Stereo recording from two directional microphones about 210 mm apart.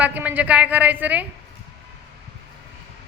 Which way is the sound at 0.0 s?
5° right (ahead or behind).